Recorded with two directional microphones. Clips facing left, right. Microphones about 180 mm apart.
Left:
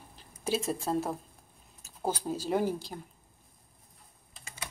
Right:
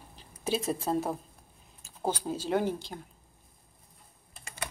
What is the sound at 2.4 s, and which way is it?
Speech, 5° left (ahead or behind).